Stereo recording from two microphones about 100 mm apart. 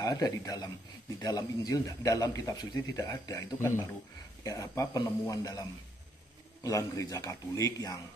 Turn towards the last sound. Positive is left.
turn(degrees=35)  # may be behind; listen again after turning